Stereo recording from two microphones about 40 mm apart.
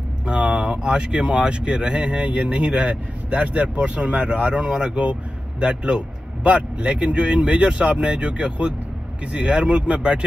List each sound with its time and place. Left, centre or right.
0.3 s speech: right